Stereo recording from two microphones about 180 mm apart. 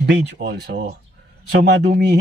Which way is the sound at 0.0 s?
70° right (ahead or behind).